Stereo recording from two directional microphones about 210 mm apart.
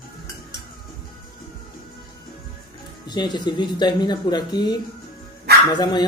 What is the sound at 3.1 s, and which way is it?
Speech, 20° left (ahead or behind).